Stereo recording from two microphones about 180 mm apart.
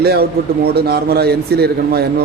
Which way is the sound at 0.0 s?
60° right (ahead or behind).